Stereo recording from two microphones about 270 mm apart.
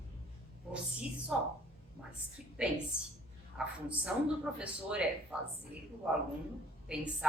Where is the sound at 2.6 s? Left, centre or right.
Centre.